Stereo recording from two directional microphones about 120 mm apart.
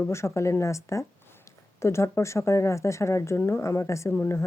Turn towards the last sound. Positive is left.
turn(degrees=20)  # may be behind; listen again after turning